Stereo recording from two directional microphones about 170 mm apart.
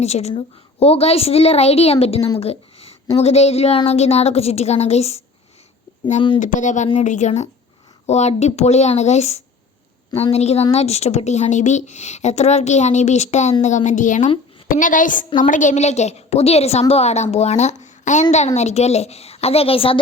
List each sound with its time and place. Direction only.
0.0 s a woman's voice: 40° left (ahead or behind)
2.4 s a sound: 35° left (ahead or behind)
3.2 s a woman's voice: 40° left (ahead or behind)
6.4 s a woman's voice: 45° left (ahead or behind)